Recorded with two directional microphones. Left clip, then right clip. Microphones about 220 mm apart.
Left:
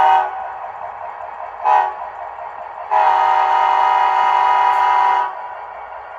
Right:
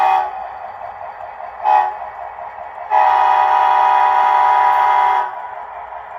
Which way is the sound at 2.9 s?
25° left (ahead or behind).